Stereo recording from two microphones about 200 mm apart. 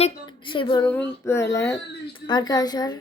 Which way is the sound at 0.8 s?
10° left (ahead or behind).